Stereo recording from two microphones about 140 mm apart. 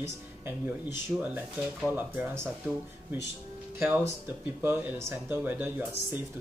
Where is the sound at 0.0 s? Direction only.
15° right (ahead or behind).